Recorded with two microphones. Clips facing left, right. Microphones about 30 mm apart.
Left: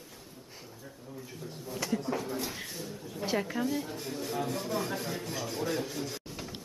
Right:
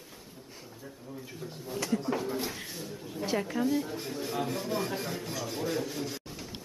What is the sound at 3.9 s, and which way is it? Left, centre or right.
Speech, centre.